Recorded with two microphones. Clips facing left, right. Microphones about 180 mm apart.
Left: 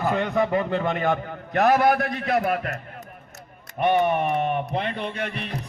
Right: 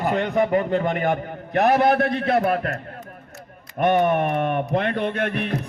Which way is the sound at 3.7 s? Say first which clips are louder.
Right 2 dB; 50° right (ahead or behind).